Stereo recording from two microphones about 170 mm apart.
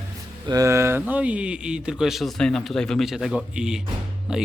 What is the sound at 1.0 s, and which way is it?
Speech, 10° right (ahead or behind).